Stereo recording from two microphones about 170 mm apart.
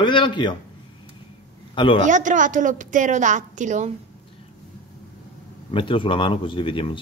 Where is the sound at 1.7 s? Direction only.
30° left (ahead or behind).